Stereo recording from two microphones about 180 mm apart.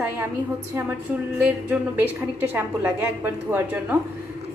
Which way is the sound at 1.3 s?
10° right (ahead or behind).